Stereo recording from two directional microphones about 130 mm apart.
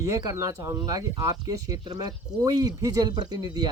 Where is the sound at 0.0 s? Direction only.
25° right (ahead or behind).